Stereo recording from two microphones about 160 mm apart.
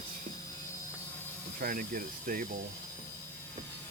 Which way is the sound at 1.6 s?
60° right (ahead or behind).